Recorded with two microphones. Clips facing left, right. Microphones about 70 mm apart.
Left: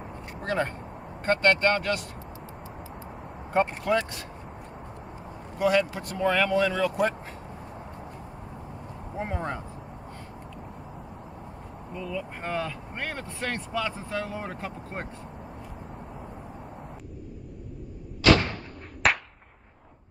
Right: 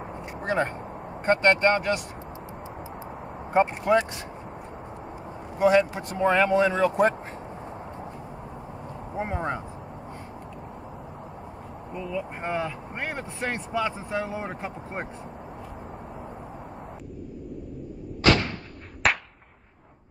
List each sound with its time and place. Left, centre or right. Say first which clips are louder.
0.4 s a sound: right 2 dB; right
1.2 s speech: right 2 dB; right
3.5 s speech: right 3 dB; right
5.6 s speech: right 4 dB; right
9.1 s speech: right 3 dB; centre
11.9 s speech: right 2 dB; centre
19.0 s whip: even; centre